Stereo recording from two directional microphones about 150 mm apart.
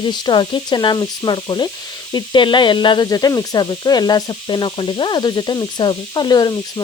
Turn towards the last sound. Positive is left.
turn(degrees=25)  # may be behind; listen again after turning